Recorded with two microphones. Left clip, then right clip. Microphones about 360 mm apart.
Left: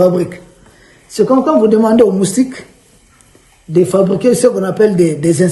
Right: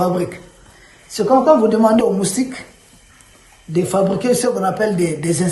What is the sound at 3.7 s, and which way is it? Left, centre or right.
Speech, centre.